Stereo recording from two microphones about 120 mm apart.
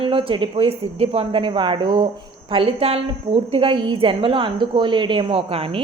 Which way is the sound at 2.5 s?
50° right (ahead or behind).